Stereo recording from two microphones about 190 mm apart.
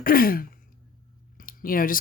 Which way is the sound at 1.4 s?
50° left (ahead or behind).